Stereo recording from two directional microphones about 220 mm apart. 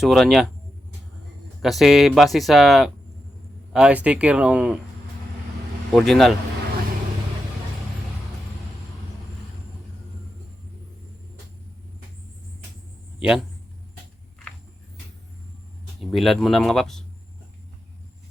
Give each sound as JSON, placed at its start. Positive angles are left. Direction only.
{"t": 0.0, "sound": "speech", "side_deg": 0}
{"t": 1.6, "sound": "speech", "side_deg": 0}
{"t": 5.9, "sound": "speech", "side_deg": 0}
{"t": 16.0, "sound": "speech", "side_deg": 0}